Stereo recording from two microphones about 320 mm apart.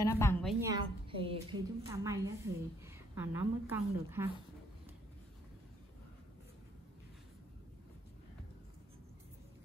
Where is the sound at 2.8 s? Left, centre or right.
Centre.